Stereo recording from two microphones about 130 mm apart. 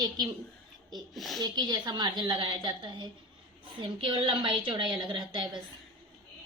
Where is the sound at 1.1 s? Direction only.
Centre (ahead or behind).